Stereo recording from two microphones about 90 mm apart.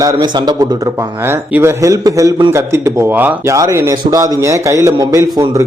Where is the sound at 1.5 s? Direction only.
30° right (ahead or behind).